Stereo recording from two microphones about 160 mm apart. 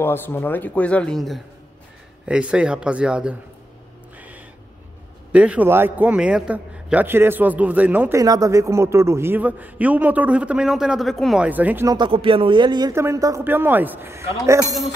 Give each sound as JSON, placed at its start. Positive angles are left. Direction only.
{"t": 0.0, "sound": "a man's voice", "side_deg": 15}
{"t": 5.3, "sound": "a man's voice", "side_deg": -10}
{"t": 8.2, "sound": "a man's voice", "side_deg": -20}
{"t": 11.9, "sound": "speech", "side_deg": -30}